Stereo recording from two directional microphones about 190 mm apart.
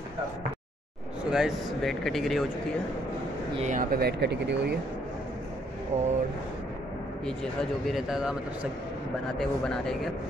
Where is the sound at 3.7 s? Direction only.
50° right (ahead or behind).